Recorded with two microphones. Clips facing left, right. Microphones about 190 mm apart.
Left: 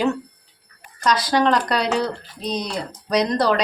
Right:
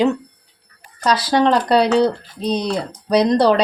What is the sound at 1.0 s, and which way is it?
Speech, 30° right (ahead or behind).